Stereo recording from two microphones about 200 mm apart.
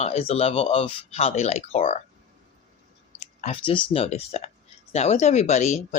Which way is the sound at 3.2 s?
35° left (ahead or behind).